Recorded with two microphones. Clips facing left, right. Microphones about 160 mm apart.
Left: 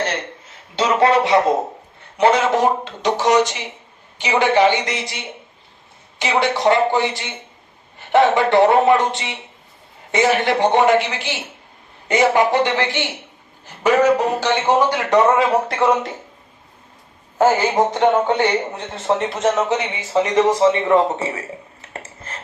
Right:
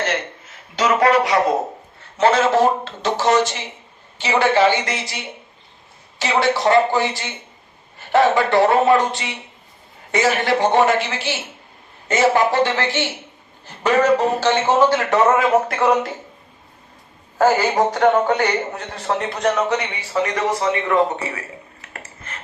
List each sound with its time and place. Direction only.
0.8 s speech: 30° left (ahead or behind)
2.1 s a man's voice: 15° left (ahead or behind)
17.4 s a man's voice: 20° left (ahead or behind)